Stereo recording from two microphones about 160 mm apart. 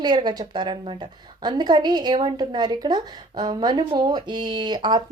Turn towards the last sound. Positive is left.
turn(degrees=-25)  # may be behind; listen again after turning